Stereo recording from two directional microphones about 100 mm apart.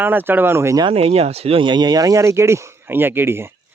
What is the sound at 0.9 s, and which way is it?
Speech, 85° right.